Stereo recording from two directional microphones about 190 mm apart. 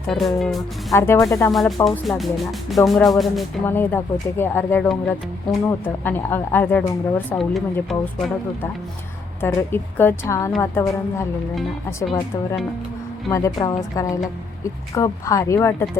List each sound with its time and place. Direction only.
0.1 s speech: centre (ahead or behind)
0.9 s a woman's voice: 10° left (ahead or behind)
1.5 s speech: centre (ahead or behind)
3.7 s a woman's voice: 10° left (ahead or behind)
9.4 s a woman's voice: 10° left (ahead or behind)
13.3 s a woman's voice: 20° left (ahead or behind)